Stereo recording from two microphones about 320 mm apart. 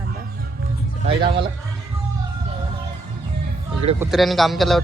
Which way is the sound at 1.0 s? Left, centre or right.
Centre.